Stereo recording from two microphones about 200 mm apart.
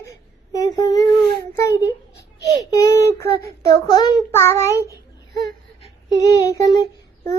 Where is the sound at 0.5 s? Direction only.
15° left (ahead or behind).